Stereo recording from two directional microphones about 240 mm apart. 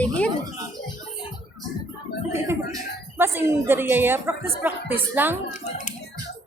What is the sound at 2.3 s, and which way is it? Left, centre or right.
A woman's voice, centre.